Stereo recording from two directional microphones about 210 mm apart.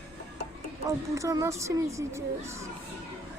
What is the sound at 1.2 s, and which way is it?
A woman's voice, 15° right (ahead or behind).